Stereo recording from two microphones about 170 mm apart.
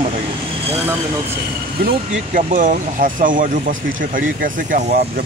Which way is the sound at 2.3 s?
50° right (ahead or behind).